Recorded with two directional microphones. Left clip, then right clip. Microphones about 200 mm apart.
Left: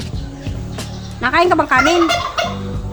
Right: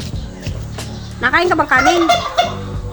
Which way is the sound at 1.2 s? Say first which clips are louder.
Even; 5° right (ahead or behind).